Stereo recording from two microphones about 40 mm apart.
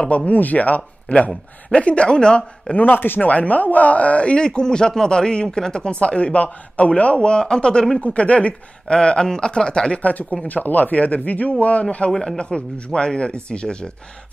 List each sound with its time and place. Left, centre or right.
0.1 s speech: left
2.7 s speech: left
3.2 s speech: left
4.5 s speech: centre; by 7.2 s left
7.2 s speech: left
8.0 s speech: left
8.8 s speech: left
9.9 s speech: left
12.1 s speech: centre
12.4 s speech: left